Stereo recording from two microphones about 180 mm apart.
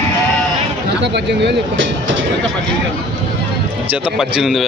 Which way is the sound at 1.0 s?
70° right (ahead or behind).